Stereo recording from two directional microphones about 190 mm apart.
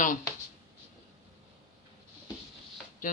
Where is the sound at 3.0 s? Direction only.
45° left (ahead or behind).